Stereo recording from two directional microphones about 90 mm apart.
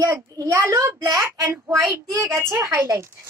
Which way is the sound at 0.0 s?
35° right (ahead or behind).